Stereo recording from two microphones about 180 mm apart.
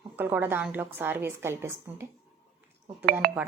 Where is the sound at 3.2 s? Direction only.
55° right (ahead or behind).